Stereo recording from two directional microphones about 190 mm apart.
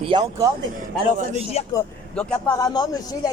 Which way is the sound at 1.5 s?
35° left (ahead or behind).